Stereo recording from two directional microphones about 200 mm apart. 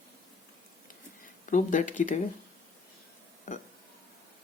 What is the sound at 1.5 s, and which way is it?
Speech, 40° left (ahead or behind).